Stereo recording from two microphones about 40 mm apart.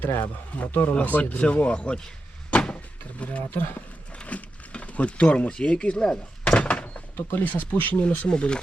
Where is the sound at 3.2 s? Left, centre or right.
Left.